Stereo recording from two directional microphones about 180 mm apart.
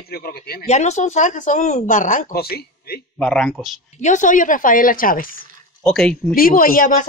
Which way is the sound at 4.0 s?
45° left (ahead or behind).